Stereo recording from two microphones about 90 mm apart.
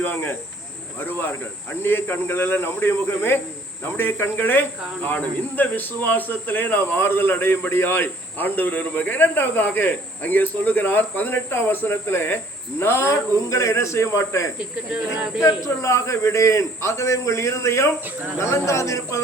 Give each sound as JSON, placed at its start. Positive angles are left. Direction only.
{"t": 0.0, "sound": "a man's voice", "side_deg": 20}
{"t": 14.9, "sound": "speech", "side_deg": -10}
{"t": 15.4, "sound": "a man's voice", "side_deg": 35}